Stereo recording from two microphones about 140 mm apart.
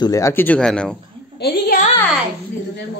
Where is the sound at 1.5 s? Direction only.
90° left.